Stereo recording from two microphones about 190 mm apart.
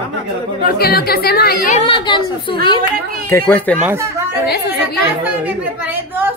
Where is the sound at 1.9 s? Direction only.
25° left (ahead or behind).